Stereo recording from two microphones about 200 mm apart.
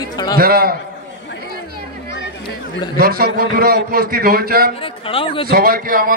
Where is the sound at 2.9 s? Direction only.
50° right (ahead or behind).